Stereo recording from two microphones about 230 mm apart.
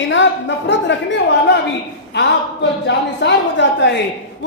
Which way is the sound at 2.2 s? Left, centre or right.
Left.